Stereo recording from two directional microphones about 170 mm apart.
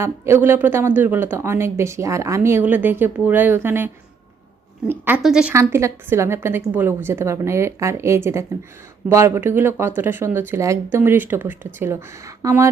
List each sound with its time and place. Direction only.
0.0 s a woman's voice: 15° right (ahead or behind)
5.5 s speech: 15° right (ahead or behind)